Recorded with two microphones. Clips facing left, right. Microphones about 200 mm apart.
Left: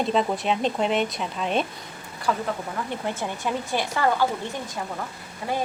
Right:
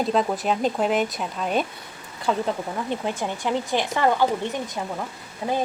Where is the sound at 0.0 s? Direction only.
Centre (ahead or behind).